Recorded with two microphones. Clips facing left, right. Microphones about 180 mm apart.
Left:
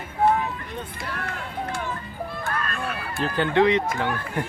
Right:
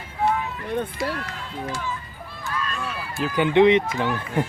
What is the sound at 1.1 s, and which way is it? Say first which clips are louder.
Music: left 1 dB; 55° left (ahead or behind).